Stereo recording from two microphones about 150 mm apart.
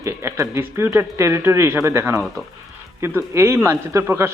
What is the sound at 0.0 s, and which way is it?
A man's voice, 20° right (ahead or behind).